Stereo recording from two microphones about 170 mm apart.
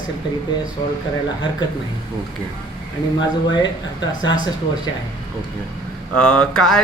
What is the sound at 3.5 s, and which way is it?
Speech, 25° left (ahead or behind).